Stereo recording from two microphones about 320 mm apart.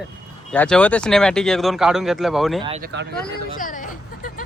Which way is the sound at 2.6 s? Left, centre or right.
Centre.